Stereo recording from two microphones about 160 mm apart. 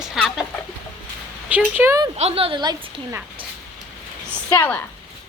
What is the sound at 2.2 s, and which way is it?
Speech, 40° right (ahead or behind).